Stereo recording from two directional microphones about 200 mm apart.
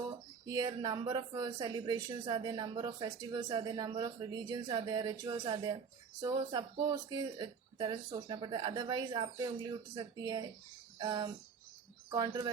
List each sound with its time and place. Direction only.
0.4 s speech: 20° right (ahead or behind)
10.9 s a sound: 20° right (ahead or behind)
12.1 s speech: 20° right (ahead or behind)